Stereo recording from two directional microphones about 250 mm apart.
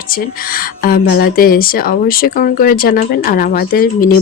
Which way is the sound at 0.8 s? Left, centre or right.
Left.